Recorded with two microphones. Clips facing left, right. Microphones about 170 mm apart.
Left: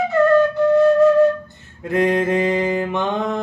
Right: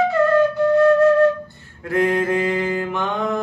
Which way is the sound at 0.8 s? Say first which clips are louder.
Even; 20° left (ahead or behind).